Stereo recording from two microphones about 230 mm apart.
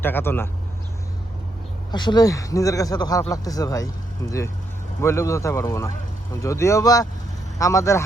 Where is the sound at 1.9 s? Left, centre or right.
Centre.